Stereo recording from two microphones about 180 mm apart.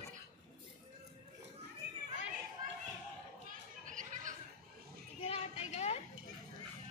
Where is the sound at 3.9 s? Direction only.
45° right (ahead or behind).